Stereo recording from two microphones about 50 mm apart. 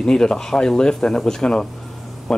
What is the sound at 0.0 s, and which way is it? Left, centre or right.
Speech, centre.